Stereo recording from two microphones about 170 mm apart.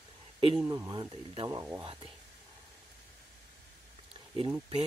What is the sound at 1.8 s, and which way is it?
Speech, 30° right (ahead or behind).